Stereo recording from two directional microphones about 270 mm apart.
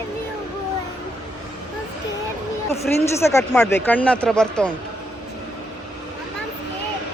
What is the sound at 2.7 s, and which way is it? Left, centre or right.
Speech, left.